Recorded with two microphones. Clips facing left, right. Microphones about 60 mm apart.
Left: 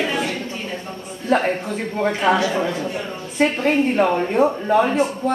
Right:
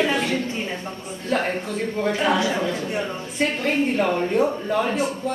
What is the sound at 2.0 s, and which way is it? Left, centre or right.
A woman's voice, left.